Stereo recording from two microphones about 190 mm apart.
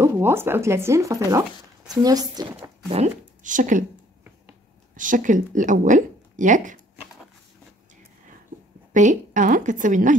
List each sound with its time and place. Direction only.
0.0 s a woman's voice: 10° right (ahead or behind)
2.9 s speech: 40° right (ahead or behind)
4.9 s a woman's voice: 45° right (ahead or behind)
8.9 s a woman's voice: 40° right (ahead or behind)